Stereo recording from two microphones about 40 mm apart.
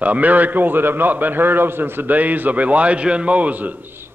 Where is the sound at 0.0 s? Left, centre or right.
Right.